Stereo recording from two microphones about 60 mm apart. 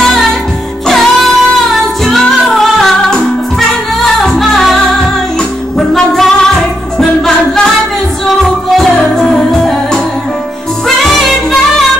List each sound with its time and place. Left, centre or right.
0.0 s music: centre
5.8 s music: centre
11.0 s music: centre